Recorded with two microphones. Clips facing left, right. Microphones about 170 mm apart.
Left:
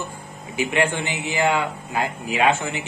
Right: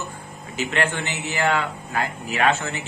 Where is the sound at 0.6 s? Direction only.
15° left (ahead or behind).